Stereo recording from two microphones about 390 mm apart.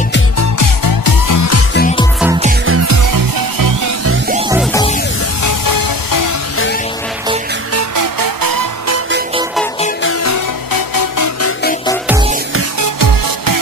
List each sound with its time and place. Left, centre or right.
0.4 s music: left
1.8 s music: centre
2.6 s music: right
3.1 s music: right
4.3 s music: centre
5.4 s music: left
7.7 s music: right
10.0 s music: left
10.7 s music: left